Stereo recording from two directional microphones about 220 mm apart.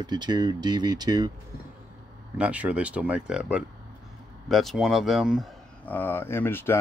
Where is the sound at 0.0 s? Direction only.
20° right (ahead or behind).